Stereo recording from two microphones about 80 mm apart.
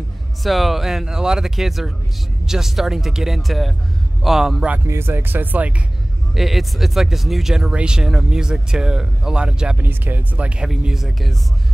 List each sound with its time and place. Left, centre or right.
0.4 s speech: centre
4.8 s speech: right
6.3 s speech: centre
9.8 s speech: right; by 11.3 s centre